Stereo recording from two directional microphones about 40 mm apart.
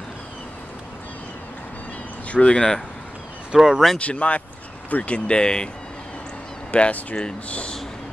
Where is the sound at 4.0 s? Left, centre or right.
Left.